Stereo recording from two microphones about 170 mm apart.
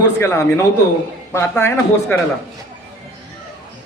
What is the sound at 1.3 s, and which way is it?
Speech, 15° left (ahead or behind).